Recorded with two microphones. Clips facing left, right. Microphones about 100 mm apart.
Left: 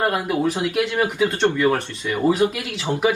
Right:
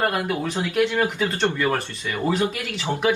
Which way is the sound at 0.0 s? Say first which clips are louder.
Left 3 dB; 10° left (ahead or behind).